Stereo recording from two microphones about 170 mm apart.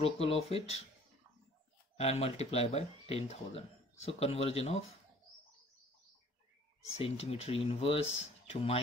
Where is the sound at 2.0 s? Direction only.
35° left (ahead or behind).